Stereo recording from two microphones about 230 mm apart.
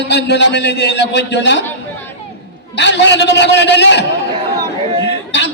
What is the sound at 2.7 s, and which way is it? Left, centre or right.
A man's voice, left.